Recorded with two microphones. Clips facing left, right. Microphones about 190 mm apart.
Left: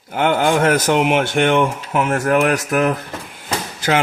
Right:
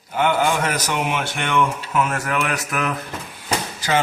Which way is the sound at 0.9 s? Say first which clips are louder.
Left 7 dB; 80° left.